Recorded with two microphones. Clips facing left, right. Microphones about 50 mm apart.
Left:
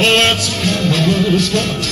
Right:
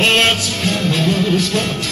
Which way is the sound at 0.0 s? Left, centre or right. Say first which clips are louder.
Left 1 dB; centre.